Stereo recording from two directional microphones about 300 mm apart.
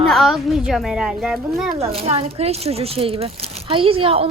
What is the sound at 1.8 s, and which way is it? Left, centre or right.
Speech, centre.